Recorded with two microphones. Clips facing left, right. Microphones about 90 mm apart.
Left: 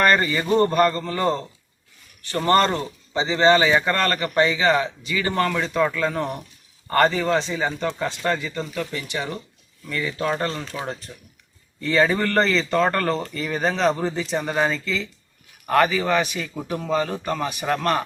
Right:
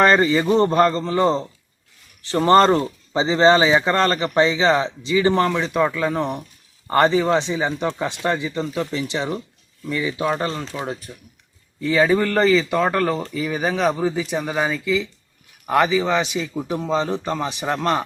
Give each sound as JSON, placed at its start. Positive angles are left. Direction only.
{"t": 0.0, "sound": "speech", "side_deg": -25}
{"t": 3.7, "sound": "speech", "side_deg": -20}
{"t": 9.8, "sound": "speech", "side_deg": -15}